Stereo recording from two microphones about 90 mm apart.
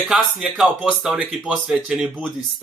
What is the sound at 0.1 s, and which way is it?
Speech, 5° right (ahead or behind).